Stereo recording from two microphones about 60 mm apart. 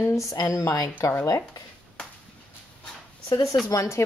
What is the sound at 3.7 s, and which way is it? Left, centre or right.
Speech, left.